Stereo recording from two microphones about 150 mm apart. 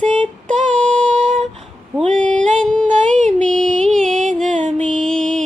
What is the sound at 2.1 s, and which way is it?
Female singing, 5° left (ahead or behind).